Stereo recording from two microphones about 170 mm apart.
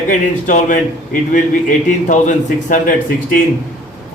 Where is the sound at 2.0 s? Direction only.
45° left (ahead or behind).